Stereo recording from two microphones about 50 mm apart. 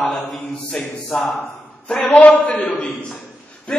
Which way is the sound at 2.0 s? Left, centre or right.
Left.